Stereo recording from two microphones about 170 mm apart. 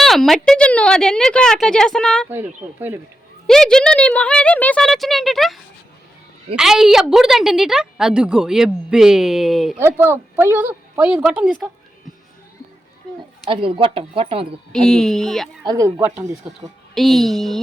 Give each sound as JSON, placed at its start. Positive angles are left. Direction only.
{"t": 0.0, "sound": "a woman's voice", "side_deg": 0}
{"t": 2.3, "sound": "a woman's voice", "side_deg": -10}
{"t": 3.4, "sound": "a woman's voice", "side_deg": 5}
{"t": 6.6, "sound": "a woman's voice", "side_deg": 0}
{"t": 9.7, "sound": "a woman's voice", "side_deg": -15}
{"t": 13.5, "sound": "speech", "side_deg": -30}
{"t": 14.7, "sound": "a woman's voice", "side_deg": 0}
{"t": 15.6, "sound": "speech", "side_deg": -20}
{"t": 16.9, "sound": "a woman's voice", "side_deg": 0}